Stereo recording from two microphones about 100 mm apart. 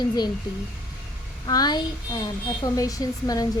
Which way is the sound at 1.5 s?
40° left (ahead or behind).